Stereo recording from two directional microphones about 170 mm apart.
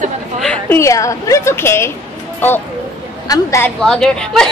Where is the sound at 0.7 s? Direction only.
15° left (ahead or behind).